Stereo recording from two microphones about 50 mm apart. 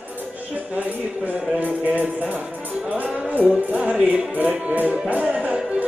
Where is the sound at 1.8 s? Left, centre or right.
Right.